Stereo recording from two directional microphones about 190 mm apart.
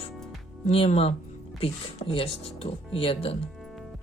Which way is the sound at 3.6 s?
Centre (ahead or behind).